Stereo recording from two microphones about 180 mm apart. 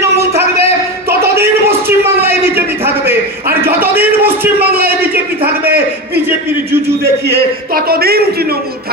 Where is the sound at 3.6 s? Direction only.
10° right (ahead or behind).